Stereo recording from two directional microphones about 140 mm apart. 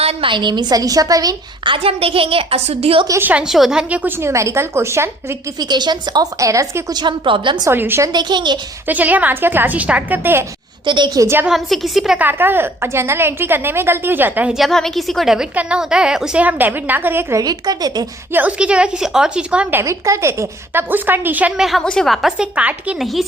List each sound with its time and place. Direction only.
0.0 s a woman's voice: 45° right (ahead or behind)
3.1 s a woman's voice: 15° right (ahead or behind)
5.5 s a woman's voice: 30° right (ahead or behind)
7.6 s a woman's voice: 15° right (ahead or behind)
8.1 s a woman's voice: 30° right (ahead or behind)
8.9 s a woman's voice: 10° right (ahead or behind)
10.8 s a woman's voice: 35° right (ahead or behind)
11.4 s a woman's voice: centre (ahead or behind); by 18.0 s 30° right (ahead or behind)
18.3 s a woman's voice: 10° right (ahead or behind)
19.8 s a woman's voice: 20° right (ahead or behind); by 23.2 s centre (ahead or behind)